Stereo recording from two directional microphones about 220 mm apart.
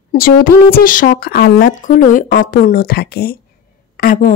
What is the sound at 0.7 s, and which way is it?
A woman's voice, 40° left (ahead or behind).